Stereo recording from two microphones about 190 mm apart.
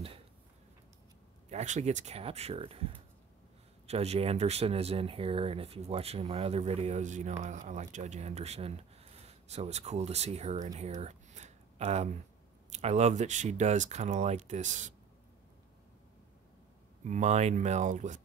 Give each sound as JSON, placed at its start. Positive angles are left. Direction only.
{"t": 1.5, "sound": "speech", "side_deg": -35}
{"t": 17.0, "sound": "speech", "side_deg": -40}